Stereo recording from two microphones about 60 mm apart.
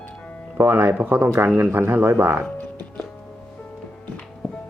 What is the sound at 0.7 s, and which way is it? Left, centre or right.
Speech, right.